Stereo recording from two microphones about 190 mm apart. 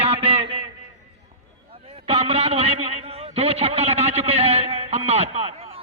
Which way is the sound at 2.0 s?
30° right (ahead or behind).